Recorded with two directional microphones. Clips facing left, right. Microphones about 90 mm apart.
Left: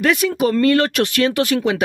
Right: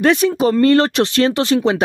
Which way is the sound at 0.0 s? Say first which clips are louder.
Right 3 dB; 30° right (ahead or behind).